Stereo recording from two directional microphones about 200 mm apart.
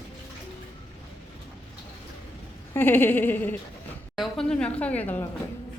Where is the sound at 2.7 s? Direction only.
10° left (ahead or behind).